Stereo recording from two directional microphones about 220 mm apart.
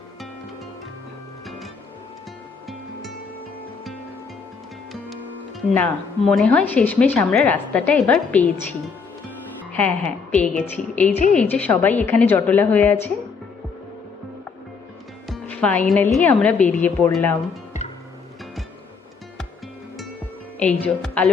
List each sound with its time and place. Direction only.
5.7 s speech: 5° left (ahead or behind)
9.7 s a woman's voice: 5° left (ahead or behind)
11.1 s a woman's voice: 35° left (ahead or behind)
11.3 s speech: 5° left (ahead or behind)
15.3 s speech: 5° left (ahead or behind)
20.6 s speech: 5° left (ahead or behind)